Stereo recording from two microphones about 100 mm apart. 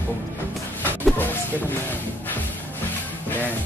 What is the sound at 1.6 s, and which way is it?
Speech, 20° left (ahead or behind).